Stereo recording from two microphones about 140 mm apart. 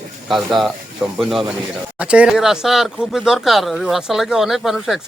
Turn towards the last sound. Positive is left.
turn(degrees=0)  # may be behind; listen again after turning